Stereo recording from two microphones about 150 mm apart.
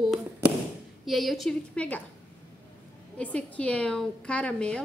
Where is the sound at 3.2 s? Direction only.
10° left (ahead or behind).